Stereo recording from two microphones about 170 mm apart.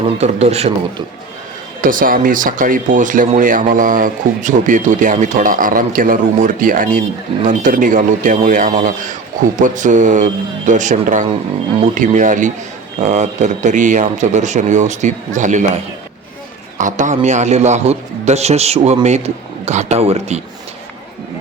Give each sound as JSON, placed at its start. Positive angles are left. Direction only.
{"t": 0.2, "sound": "a man's voice", "side_deg": -40}
{"t": 1.8, "sound": "speech", "side_deg": -55}
{"t": 16.7, "sound": "a man's voice", "side_deg": -45}